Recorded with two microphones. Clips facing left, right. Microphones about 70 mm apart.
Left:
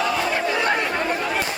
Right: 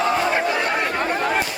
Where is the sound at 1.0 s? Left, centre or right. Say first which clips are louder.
Right 2 dB; right.